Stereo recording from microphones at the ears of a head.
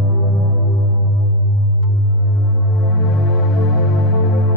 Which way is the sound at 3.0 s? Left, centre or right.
Left.